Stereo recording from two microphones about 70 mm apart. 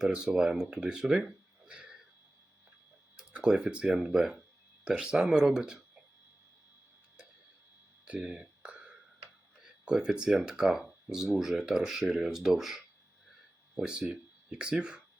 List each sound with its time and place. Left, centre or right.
0.0 s speech: centre
3.2 s speech: centre
8.0 s whispering: centre
9.6 s speech: centre